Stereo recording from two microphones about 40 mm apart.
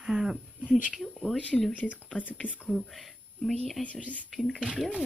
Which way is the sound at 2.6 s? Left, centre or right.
Centre.